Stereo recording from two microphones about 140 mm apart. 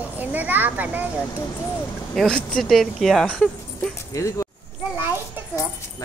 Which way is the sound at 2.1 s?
5° left (ahead or behind).